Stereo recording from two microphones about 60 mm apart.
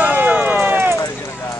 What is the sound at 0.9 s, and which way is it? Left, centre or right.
Clip-clop, left.